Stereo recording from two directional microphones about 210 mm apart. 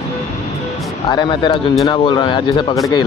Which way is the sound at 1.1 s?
20° left (ahead or behind).